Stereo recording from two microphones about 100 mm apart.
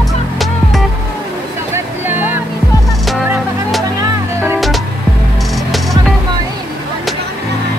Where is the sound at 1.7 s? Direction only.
20° right (ahead or behind).